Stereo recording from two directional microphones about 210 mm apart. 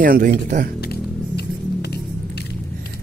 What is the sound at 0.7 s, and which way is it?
Music, 50° left (ahead or behind).